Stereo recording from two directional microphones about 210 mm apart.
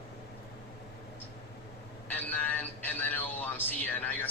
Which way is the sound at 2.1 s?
10° left (ahead or behind).